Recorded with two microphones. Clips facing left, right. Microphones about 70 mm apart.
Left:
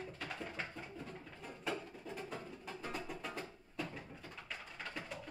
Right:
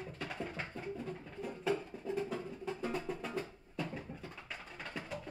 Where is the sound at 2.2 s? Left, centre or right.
Centre.